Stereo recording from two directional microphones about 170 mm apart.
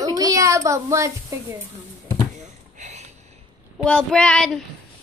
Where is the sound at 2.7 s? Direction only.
45° right (ahead or behind).